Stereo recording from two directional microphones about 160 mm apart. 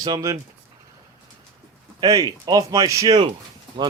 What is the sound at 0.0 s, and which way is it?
Speech, 20° right (ahead or behind).